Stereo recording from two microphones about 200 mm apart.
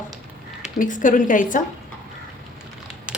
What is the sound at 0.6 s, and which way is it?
Speech, 40° left (ahead or behind).